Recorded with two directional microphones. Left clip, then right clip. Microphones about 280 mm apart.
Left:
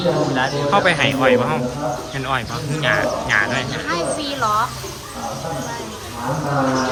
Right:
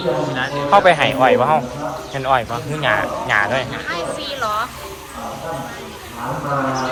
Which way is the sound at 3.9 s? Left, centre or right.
Left.